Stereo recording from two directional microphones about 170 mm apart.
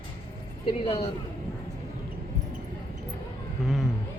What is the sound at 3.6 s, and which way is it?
Speech, centre (ahead or behind).